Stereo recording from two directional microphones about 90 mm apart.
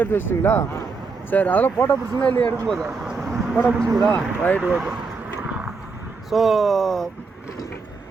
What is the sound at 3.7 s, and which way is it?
Speech, 40° right (ahead or behind).